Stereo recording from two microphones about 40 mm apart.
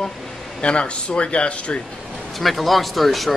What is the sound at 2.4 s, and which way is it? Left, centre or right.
Speech, centre.